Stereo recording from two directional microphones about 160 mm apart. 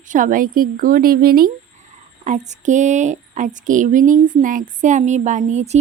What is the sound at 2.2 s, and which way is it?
Speech, 50° right (ahead or behind).